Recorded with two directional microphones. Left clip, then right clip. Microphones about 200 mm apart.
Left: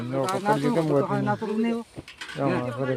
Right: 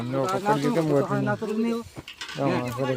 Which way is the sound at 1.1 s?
15° left (ahead or behind).